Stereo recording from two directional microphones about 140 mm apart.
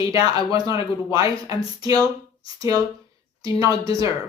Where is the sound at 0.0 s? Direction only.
25° right (ahead or behind).